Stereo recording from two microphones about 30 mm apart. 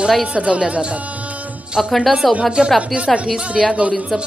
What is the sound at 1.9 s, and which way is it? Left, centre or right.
Speech, centre.